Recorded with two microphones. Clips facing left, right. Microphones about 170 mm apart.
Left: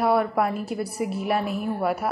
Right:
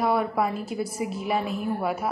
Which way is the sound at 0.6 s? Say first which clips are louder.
Left 1 dB; 60° left (ahead or behind).